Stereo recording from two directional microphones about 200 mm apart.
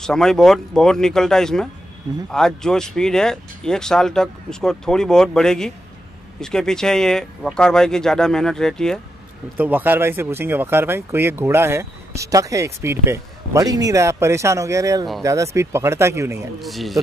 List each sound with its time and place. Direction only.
0.0 s speech: 5° left (ahead or behind)
9.6 s speech: 10° right (ahead or behind)
16.6 s speech: centre (ahead or behind)